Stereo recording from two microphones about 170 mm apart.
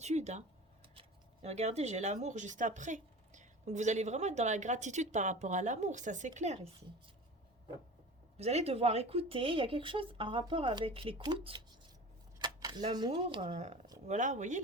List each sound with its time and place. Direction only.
0.0 s speech: 40° right (ahead or behind)
8.4 s speech: 40° right (ahead or behind)
12.4 s a sound: 25° right (ahead or behind)
12.9 s speech: 25° right (ahead or behind)
14.1 s speech: 45° right (ahead or behind)